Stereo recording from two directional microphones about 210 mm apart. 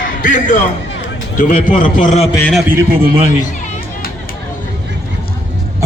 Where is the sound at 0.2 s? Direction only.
40° left (ahead or behind).